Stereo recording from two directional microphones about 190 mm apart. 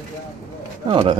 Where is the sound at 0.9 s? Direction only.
25° right (ahead or behind).